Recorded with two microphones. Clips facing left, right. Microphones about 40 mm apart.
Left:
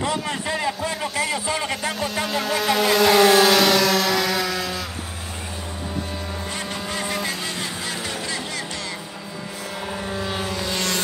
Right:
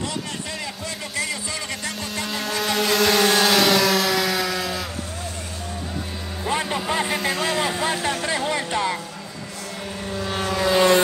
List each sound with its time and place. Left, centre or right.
0.0 s music: left
2.0 s vehicle: centre
6.6 s vehicle: right
10.0 s vehicle: centre
10.7 s vehicle: centre